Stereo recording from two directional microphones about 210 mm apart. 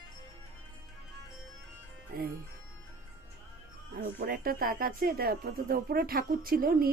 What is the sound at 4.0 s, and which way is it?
Speech, 45° right (ahead or behind).